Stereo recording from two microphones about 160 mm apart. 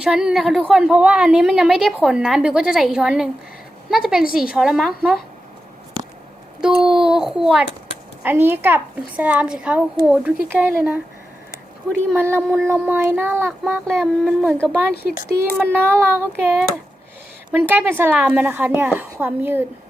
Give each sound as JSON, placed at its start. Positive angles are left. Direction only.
{"t": 0.0, "sound": "a woman's voice", "side_deg": -5}
{"t": 6.6, "sound": "a child's voice", "side_deg": -5}
{"t": 13.8, "sound": "a woman's voice", "side_deg": 5}
{"t": 14.9, "sound": "speech", "side_deg": 80}
{"t": 15.7, "sound": "a woman's voice", "side_deg": -15}